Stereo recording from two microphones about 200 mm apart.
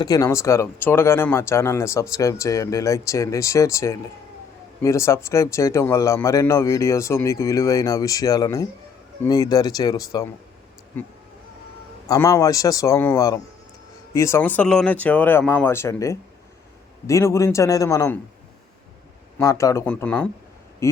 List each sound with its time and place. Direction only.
0.0 s speech: 15° left (ahead or behind)
12.0 s speech: 15° left (ahead or behind)
19.4 s speech: 15° left (ahead or behind)